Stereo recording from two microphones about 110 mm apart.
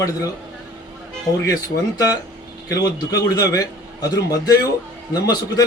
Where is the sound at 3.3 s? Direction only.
30° left (ahead or behind).